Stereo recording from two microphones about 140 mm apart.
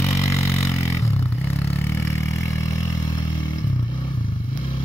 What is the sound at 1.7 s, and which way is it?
Vehicle, 15° left (ahead or behind).